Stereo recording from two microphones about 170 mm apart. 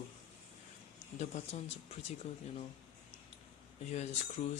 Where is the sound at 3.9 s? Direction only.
40° left (ahead or behind).